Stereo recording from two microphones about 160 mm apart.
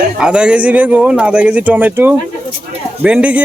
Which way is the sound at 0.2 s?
5° right (ahead or behind).